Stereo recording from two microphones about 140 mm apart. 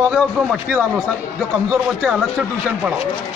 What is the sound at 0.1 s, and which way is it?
Speech, 5° right (ahead or behind).